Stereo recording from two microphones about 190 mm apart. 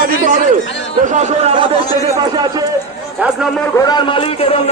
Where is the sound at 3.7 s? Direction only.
20° left (ahead or behind).